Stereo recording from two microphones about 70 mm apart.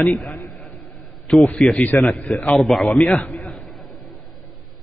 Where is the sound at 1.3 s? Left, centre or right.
Centre.